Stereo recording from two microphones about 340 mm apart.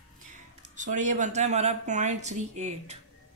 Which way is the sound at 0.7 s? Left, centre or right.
Right.